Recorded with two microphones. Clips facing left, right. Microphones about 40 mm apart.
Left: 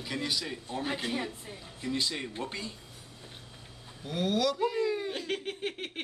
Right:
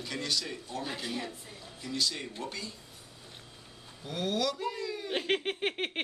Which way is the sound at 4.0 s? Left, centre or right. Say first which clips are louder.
Left 3 dB; centre.